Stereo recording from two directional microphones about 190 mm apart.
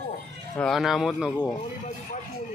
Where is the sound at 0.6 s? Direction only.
Centre (ahead or behind).